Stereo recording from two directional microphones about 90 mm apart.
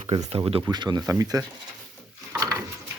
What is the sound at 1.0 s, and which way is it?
Speech, 40° right (ahead or behind).